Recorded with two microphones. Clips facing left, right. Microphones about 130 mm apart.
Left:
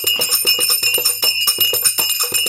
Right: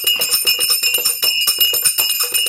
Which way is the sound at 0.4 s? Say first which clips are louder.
Left 3 dB; 40° left (ahead or behind).